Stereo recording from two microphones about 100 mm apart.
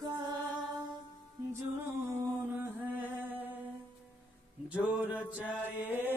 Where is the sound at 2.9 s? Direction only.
20° right (ahead or behind).